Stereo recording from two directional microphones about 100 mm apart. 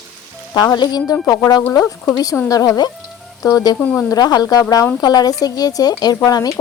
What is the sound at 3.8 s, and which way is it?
Speech, 10° left (ahead or behind).